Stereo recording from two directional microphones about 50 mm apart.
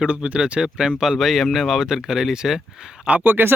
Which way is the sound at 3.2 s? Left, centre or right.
Right.